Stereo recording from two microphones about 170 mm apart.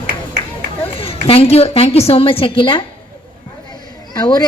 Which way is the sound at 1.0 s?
35° left (ahead or behind).